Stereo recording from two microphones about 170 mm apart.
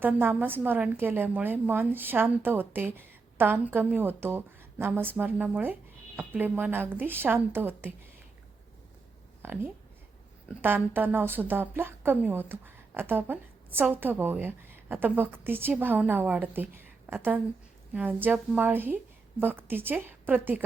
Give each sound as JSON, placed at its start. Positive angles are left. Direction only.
{"t": 0.0, "sound": "speech", "side_deg": -10}
{"t": 9.4, "sound": "speech", "side_deg": -10}